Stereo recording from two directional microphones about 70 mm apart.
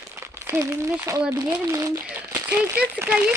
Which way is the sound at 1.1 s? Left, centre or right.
Right.